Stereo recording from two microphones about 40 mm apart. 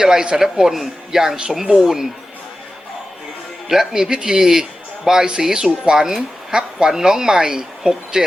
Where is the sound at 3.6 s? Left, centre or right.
Centre.